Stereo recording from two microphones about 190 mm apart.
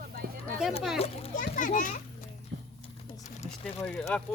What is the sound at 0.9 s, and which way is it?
A child's voice, 35° left (ahead or behind).